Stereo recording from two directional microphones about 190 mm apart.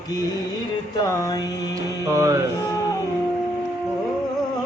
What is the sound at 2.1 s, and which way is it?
Music, 15° right (ahead or behind).